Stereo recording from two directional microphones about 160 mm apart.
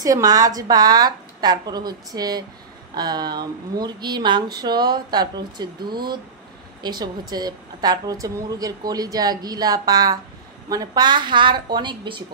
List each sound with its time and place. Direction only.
0.0 s a woman's voice: 25° right (ahead or behind)